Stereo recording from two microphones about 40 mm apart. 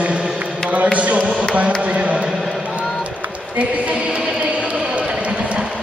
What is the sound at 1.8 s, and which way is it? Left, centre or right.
Speech, right.